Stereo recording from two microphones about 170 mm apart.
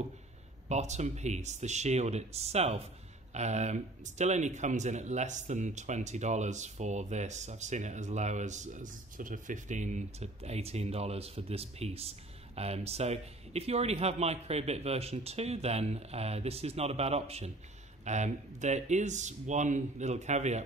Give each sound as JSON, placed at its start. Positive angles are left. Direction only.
{"t": 0.7, "sound": "speech", "side_deg": -40}